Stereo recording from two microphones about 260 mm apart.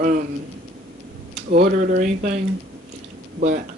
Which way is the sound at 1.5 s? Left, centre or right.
Right.